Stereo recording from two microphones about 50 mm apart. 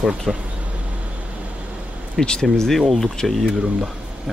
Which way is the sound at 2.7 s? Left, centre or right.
Centre.